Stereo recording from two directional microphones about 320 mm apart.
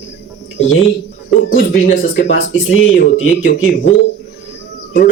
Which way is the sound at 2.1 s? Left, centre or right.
Left.